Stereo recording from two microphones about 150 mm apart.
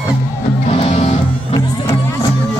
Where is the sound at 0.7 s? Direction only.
45° left (ahead or behind).